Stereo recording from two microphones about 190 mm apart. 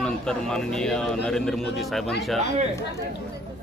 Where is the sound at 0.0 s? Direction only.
5° left (ahead or behind).